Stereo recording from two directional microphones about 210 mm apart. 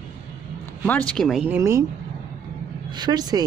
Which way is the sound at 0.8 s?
5° left (ahead or behind).